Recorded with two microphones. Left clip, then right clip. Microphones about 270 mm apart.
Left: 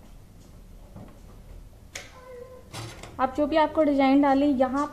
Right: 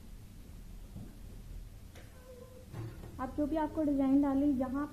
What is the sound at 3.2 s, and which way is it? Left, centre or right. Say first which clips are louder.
A woman's voice: left 12 dB; left.